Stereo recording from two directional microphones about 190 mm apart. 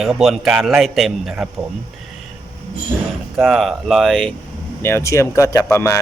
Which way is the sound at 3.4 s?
Centre (ahead or behind).